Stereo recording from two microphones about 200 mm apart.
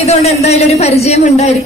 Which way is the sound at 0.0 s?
30° left (ahead or behind).